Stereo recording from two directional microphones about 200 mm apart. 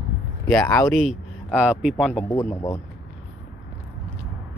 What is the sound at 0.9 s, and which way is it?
Speech, 5° right (ahead or behind).